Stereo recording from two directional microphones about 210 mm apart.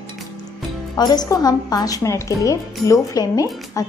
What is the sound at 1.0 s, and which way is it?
A woman's voice, 20° left (ahead or behind).